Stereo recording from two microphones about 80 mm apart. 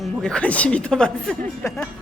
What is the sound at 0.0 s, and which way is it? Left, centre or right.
A woman's voice, centre.